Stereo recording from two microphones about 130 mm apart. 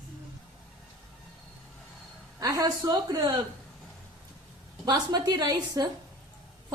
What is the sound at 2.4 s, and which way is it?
Speech, 30° right (ahead or behind).